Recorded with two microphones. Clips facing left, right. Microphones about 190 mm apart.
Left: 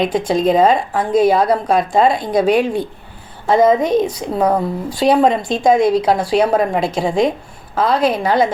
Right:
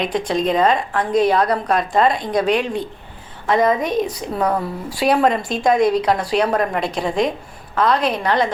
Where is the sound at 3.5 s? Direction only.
25° left (ahead or behind).